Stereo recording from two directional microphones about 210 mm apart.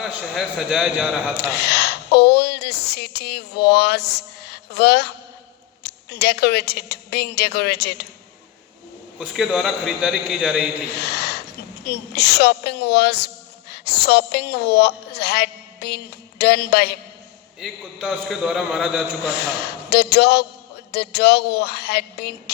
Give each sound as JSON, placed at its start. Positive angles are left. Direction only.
{"t": 0.0, "sound": "a man's voice", "side_deg": -5}
{"t": 1.4, "sound": "a woman's voice", "side_deg": 50}
{"t": 9.1, "sound": "a man's voice", "side_deg": 0}
{"t": 10.9, "sound": "a woman's voice", "side_deg": 50}
{"t": 17.6, "sound": "a man's voice", "side_deg": 0}
{"t": 19.2, "sound": "a woman's voice", "side_deg": 50}